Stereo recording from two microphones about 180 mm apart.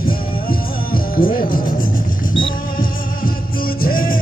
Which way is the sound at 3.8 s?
50° left (ahead or behind).